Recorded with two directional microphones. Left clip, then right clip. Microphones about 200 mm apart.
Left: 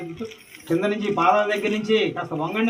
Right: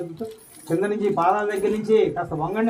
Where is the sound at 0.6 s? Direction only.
55° right (ahead or behind).